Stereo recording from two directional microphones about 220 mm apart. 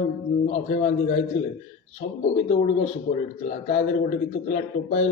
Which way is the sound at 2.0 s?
30° left (ahead or behind).